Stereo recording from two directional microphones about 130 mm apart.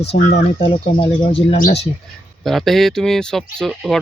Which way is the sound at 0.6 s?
40° left (ahead or behind).